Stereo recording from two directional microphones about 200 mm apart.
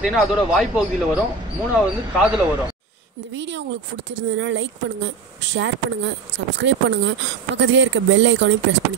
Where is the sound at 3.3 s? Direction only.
65° right (ahead or behind).